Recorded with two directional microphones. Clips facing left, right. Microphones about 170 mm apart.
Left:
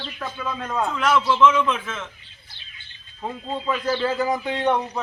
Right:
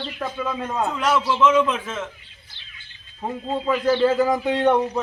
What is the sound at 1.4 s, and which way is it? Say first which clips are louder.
Speech: right 3 dB; 35° right (ahead or behind).